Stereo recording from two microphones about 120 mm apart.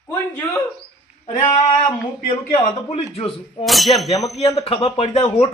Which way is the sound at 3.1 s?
50° left (ahead or behind).